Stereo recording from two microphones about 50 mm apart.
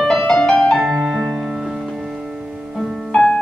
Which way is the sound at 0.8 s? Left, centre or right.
Centre.